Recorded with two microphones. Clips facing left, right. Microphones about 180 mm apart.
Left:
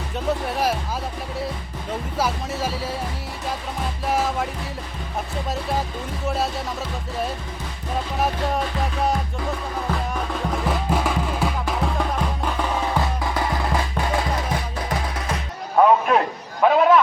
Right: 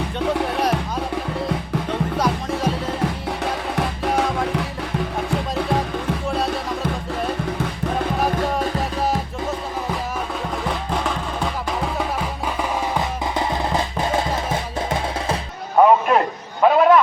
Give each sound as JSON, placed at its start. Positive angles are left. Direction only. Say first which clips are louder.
{"t": 2.1, "sound": "music", "louder": "even", "side_deg": 5}
{"t": 3.0, "sound": "music", "louder": "right 6 dB", "side_deg": -75}
{"t": 10.7, "sound": "music", "louder": "left 2 dB", "side_deg": 5}
{"t": 12.9, "sound": "music", "louder": "right 1 dB", "side_deg": -20}
{"t": 15.8, "sound": "a sound", "louder": "right 2 dB", "side_deg": 0}